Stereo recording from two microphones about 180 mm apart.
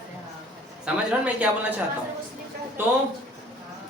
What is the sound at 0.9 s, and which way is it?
Speech, 5° right (ahead or behind).